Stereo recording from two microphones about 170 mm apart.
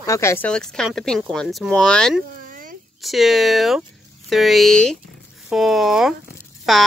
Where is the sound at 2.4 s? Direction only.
55° right (ahead or behind).